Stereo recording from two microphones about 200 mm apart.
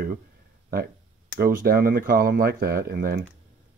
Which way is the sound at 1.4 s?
45° right (ahead or behind).